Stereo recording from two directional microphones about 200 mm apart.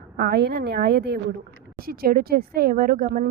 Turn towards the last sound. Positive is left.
turn(degrees=-45)  # may be behind; listen again after turning